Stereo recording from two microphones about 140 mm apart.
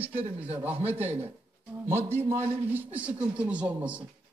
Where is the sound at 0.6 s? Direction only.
15° right (ahead or behind).